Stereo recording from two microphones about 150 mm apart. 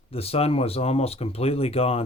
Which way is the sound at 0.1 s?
40° left (ahead or behind).